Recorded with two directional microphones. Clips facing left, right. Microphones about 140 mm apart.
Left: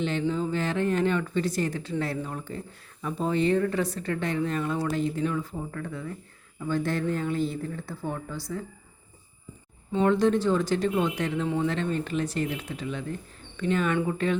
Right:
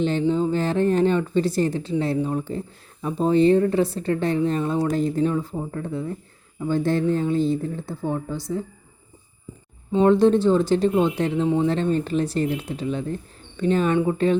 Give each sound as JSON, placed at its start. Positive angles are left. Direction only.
{"t": 0.0, "sound": "speech", "side_deg": -35}
{"t": 9.9, "sound": "speech", "side_deg": -30}